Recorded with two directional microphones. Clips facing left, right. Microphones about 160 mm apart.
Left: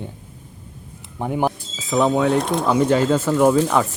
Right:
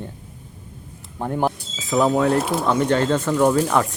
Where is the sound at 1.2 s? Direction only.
5° left (ahead or behind).